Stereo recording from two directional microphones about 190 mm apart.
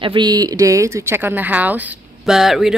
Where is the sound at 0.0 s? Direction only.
25° right (ahead or behind).